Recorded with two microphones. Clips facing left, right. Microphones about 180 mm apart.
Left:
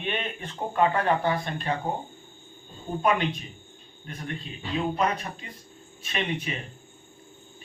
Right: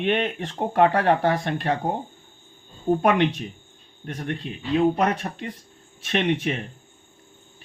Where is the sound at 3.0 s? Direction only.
70° right (ahead or behind).